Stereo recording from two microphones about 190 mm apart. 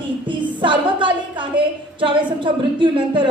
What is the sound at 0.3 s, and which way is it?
A woman's voice, 25° right (ahead or behind).